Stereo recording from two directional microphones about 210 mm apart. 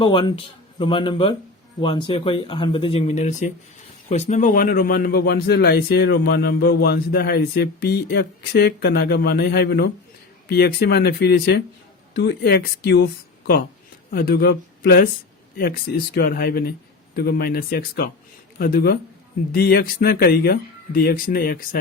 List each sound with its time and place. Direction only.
0.0 s speech: 25° left (ahead or behind); by 13.1 s 55° left (ahead or behind)
14.1 s speech: 45° left (ahead or behind)